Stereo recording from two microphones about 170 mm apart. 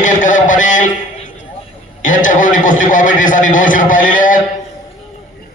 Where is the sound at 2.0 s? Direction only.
50° left (ahead or behind).